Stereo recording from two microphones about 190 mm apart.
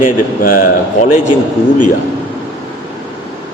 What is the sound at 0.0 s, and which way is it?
A man's voice, 45° left (ahead or behind).